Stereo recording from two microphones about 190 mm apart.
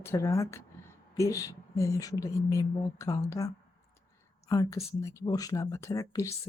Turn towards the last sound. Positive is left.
turn(degrees=15)  # may be behind; listen again after turning